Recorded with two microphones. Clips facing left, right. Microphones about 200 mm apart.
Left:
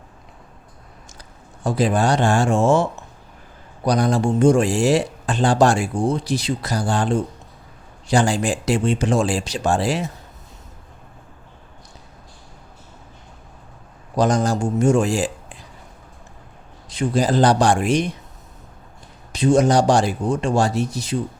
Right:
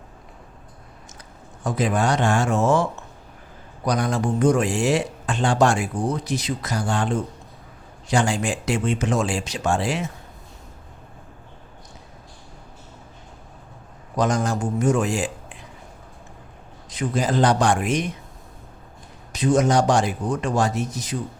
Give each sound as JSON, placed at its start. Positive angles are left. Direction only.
{"t": 1.6, "sound": "speech", "side_deg": 30}
{"t": 3.8, "sound": "speech", "side_deg": 35}
{"t": 14.2, "sound": "speech", "side_deg": 35}
{"t": 16.9, "sound": "speech", "side_deg": 30}
{"t": 19.3, "sound": "speech", "side_deg": 30}